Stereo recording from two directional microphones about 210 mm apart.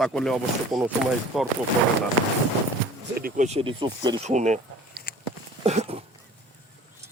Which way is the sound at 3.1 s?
40° right (ahead or behind).